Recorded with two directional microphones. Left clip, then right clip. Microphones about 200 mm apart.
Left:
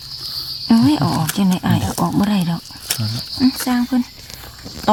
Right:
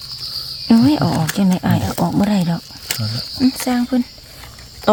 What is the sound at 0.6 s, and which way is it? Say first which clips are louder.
Speech: right 1 dB; 15° right (ahead or behind).